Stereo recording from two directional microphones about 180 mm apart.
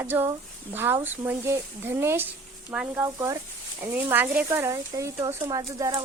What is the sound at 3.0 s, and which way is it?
Speech, 15° right (ahead or behind).